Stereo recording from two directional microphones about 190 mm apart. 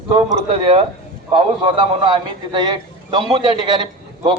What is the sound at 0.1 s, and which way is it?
A man's voice, 20° right (ahead or behind).